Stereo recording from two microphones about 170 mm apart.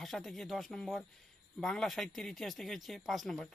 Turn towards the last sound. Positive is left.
turn(degrees=0)  # may be behind; listen again after turning